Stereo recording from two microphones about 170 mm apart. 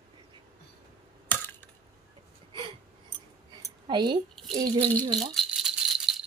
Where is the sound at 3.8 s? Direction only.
25° right (ahead or behind).